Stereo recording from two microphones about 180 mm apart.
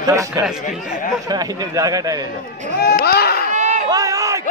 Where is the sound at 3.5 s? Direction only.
40° right (ahead or behind).